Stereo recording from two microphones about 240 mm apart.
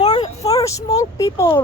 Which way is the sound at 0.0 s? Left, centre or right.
Centre.